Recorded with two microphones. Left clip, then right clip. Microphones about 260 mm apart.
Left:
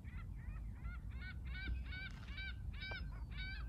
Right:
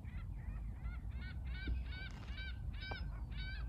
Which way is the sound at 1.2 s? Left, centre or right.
Centre.